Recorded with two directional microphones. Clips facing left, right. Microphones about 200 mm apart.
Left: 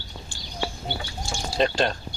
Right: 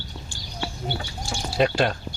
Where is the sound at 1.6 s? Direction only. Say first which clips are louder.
Right 2 dB; 10° right (ahead or behind).